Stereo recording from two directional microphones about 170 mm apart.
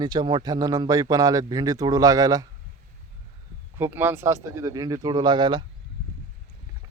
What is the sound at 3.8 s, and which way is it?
Speech, 10° right (ahead or behind).